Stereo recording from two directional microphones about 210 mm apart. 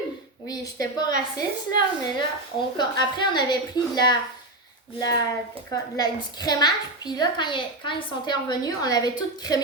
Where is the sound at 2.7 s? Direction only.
20° left (ahead or behind).